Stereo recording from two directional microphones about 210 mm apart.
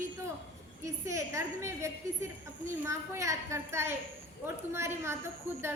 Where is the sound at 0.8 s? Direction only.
15° right (ahead or behind).